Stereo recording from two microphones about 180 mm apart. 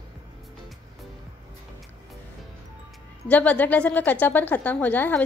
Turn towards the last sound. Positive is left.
turn(degrees=10)  # may be behind; listen again after turning